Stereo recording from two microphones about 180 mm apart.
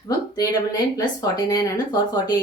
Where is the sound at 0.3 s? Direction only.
20° left (ahead or behind).